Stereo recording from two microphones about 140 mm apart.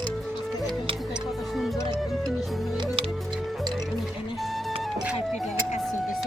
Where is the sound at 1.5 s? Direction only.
Centre (ahead or behind).